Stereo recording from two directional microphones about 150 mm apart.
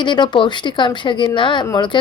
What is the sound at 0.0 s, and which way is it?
A woman's voice, 30° left (ahead or behind).